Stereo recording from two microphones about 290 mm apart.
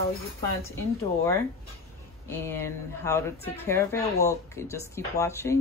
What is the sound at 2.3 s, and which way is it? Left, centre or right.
Speech, centre.